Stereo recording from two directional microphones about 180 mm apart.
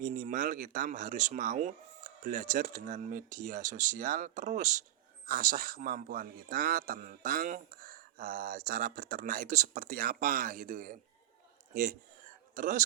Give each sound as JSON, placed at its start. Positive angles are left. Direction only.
{"t": 0.0, "sound": "a man's voice", "side_deg": -45}